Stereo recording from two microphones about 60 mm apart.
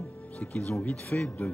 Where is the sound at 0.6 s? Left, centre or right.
Left.